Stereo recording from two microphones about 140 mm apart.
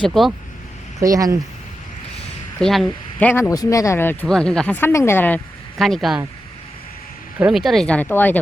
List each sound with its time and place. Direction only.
0.0 s speech: centre (ahead or behind)
0.9 s speech: 25° right (ahead or behind)
2.6 s speech: centre (ahead or behind)
3.5 s speech: 25° left (ahead or behind)
4.3 s speech: 5° left (ahead or behind)
5.7 s speech: centre (ahead or behind)
7.3 s speech: 5° right (ahead or behind); by 8.4 s 15° left (ahead or behind)